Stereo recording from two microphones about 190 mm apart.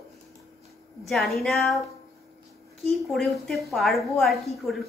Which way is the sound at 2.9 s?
Centre (ahead or behind).